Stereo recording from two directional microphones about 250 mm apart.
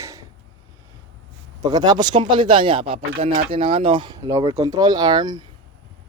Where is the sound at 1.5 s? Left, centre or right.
Centre.